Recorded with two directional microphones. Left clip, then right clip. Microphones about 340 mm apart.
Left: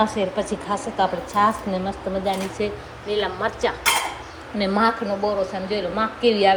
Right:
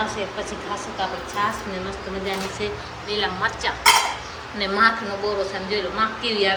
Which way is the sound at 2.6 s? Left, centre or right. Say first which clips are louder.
Left 1 dB; centre.